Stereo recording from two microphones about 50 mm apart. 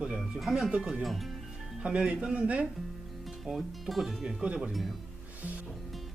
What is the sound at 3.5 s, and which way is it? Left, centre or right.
Speech, centre.